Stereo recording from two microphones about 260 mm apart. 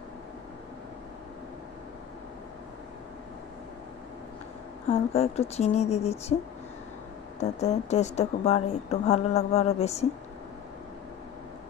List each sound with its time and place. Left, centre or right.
5.1 s a woman's voice: left
7.3 s a woman's voice: left